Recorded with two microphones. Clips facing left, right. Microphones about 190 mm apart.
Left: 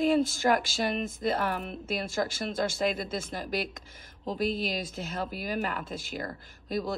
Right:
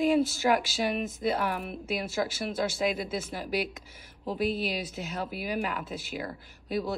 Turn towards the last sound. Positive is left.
turn(degrees=-10)  # may be behind; listen again after turning